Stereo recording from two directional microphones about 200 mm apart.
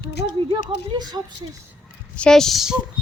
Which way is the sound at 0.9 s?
20° right (ahead or behind).